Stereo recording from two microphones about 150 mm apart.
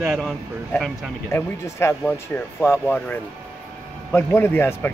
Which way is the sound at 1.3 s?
20° left (ahead or behind).